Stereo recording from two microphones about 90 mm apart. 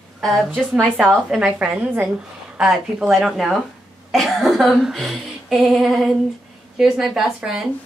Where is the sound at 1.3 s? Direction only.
10° right (ahead or behind).